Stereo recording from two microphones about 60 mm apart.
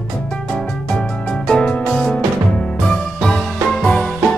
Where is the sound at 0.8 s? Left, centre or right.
Centre.